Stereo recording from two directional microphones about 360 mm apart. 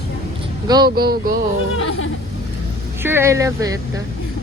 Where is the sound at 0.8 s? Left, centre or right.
Right.